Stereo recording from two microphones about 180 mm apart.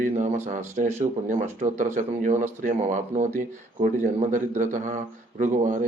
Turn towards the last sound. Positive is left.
turn(degrees=-45)  # may be behind; listen again after turning